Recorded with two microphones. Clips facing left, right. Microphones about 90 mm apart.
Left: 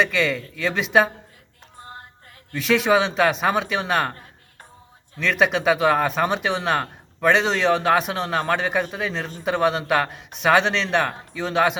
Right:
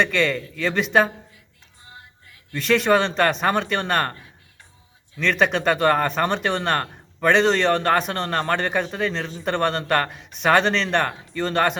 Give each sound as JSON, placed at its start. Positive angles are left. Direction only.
{"t": 0.0, "sound": "speech", "side_deg": 0}
{"t": 1.8, "sound": "music", "side_deg": 50}
{"t": 2.5, "sound": "speech", "side_deg": 0}
{"t": 5.2, "sound": "speech", "side_deg": 5}